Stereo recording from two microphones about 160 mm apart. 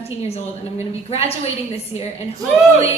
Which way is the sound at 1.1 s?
40° left (ahead or behind).